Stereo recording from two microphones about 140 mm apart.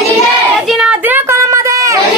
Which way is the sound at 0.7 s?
5° right (ahead or behind).